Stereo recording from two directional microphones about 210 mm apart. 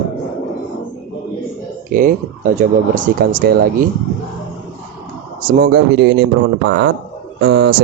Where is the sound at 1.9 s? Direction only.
40° right (ahead or behind).